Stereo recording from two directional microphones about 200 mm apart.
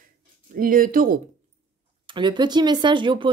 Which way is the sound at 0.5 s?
45° right (ahead or behind).